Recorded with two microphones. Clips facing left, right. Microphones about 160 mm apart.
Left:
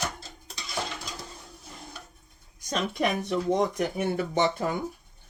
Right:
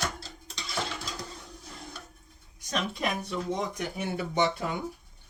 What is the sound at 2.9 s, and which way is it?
Speech, 65° left (ahead or behind).